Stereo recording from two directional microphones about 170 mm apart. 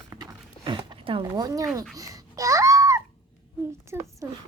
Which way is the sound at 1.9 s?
20° right (ahead or behind).